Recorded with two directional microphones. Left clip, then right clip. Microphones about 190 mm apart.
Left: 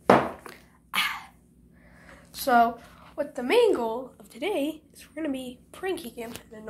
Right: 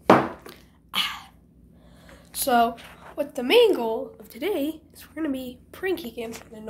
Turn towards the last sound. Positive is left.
turn(degrees=-20)  # may be behind; listen again after turning